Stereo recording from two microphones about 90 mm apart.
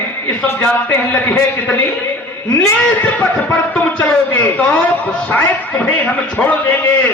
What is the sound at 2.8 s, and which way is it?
A man's voice, 15° left (ahead or behind).